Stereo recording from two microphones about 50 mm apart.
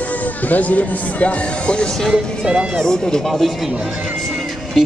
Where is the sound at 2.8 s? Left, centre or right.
Centre.